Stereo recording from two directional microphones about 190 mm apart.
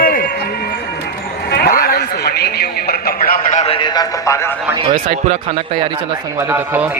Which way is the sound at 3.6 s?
30° left (ahead or behind).